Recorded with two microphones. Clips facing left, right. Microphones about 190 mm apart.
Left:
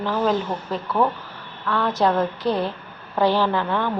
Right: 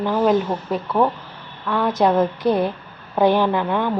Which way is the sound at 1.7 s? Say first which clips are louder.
Right 3 dB; 15° right (ahead or behind).